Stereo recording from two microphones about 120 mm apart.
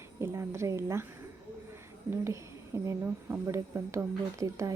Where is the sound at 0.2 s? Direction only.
25° right (ahead or behind).